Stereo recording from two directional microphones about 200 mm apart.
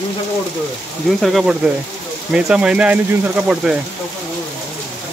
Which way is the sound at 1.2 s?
Centre (ahead or behind).